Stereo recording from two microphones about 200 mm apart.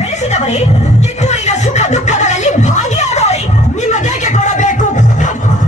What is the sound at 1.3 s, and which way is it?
Speech, 35° left (ahead or behind).